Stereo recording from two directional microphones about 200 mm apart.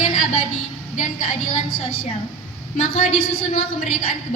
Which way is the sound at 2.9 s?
45° left (ahead or behind).